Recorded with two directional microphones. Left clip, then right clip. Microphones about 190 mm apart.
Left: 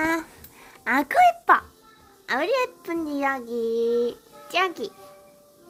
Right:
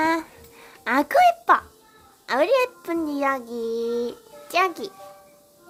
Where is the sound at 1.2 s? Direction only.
Centre (ahead or behind).